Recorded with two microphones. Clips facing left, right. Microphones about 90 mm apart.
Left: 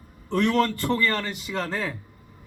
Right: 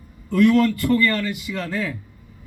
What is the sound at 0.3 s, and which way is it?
A man's voice, 30° left (ahead or behind).